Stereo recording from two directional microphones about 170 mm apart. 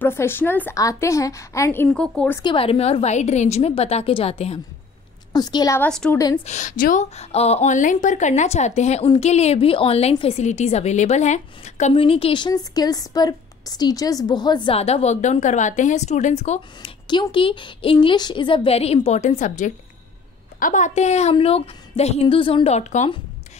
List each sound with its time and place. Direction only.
0.0 s a woman's voice: 15° left (ahead or behind)
2.4 s a woman's voice: 35° left (ahead or behind)
5.3 s a woman's voice: 25° left (ahead or behind)
5.8 s a woman's voice: 5° left (ahead or behind)
6.1 s a woman's voice: 20° left (ahead or behind)
6.4 s a woman's voice: 45° left (ahead or behind)
17.1 s a woman's voice: 30° left (ahead or behind)